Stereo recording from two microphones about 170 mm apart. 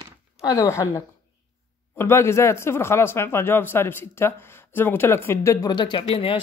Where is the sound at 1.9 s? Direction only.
15° left (ahead or behind).